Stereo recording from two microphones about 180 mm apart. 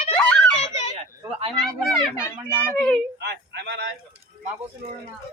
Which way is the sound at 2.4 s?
5° left (ahead or behind).